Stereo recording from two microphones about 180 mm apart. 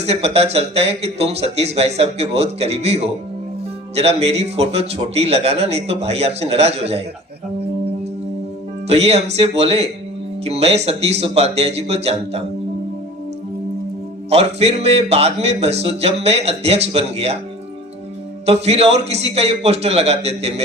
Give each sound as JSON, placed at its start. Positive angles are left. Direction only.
{"t": 0.0, "sound": "a man's voice", "side_deg": -35}
{"t": 8.9, "sound": "a man's voice", "side_deg": -35}
{"t": 14.3, "sound": "a man's voice", "side_deg": -35}
{"t": 18.4, "sound": "a man's voice", "side_deg": -35}